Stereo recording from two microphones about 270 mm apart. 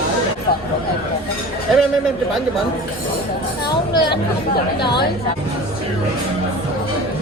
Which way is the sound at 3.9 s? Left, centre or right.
Centre.